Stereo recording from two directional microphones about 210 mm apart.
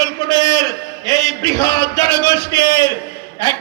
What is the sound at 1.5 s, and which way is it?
Speech, 20° left (ahead or behind).